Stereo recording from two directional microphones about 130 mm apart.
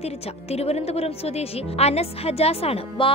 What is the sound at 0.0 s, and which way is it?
Speech, 50° left (ahead or behind).